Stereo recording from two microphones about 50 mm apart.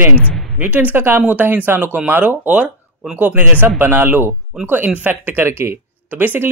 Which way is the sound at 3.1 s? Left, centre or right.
Right.